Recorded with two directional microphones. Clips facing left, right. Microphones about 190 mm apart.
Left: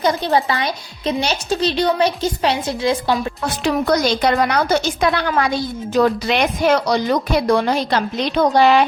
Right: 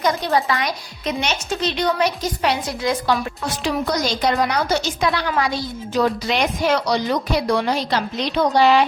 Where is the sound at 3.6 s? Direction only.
60° left (ahead or behind).